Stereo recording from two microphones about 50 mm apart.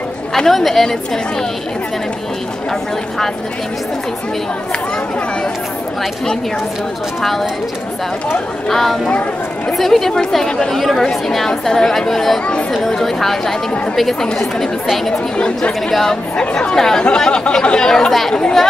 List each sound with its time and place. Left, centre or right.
0.3 s speech: centre
7.2 s speech: centre
8.6 s speech: centre
15.3 s speech: left
15.9 s speech: centre